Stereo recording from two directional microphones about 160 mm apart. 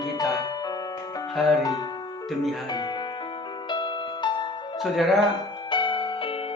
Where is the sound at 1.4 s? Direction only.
Centre (ahead or behind).